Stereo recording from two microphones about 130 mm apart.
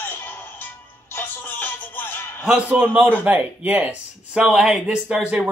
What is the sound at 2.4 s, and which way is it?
Speech, 10° right (ahead or behind).